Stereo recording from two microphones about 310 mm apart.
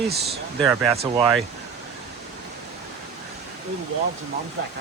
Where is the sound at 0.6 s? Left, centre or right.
Centre.